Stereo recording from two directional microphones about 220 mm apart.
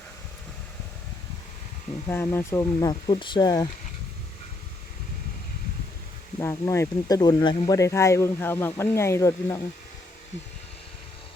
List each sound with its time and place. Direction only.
2.0 s speech: 10° left (ahead or behind)
6.4 s speech: 15° left (ahead or behind)